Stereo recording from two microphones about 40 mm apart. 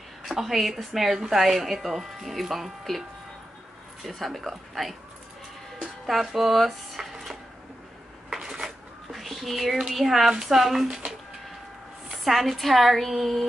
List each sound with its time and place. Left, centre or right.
0.2 s a woman's voice: centre
4.0 s a woman's voice: centre
6.0 s a woman's voice: centre
8.3 s a sound: centre
8.6 s a sound: centre
9.9 s a woman's voice: centre
12.3 s a woman's voice: centre